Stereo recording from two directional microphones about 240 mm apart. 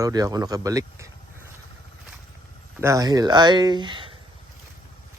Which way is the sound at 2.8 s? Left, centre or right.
Centre.